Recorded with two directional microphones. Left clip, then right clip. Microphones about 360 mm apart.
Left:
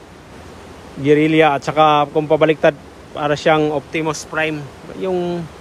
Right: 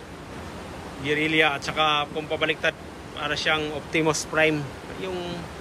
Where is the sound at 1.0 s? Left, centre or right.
Centre.